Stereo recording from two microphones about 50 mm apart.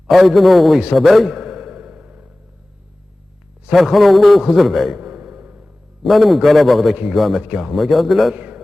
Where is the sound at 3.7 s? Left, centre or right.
Centre.